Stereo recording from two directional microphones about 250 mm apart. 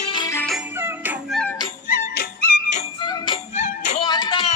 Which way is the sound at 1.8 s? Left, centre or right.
Left.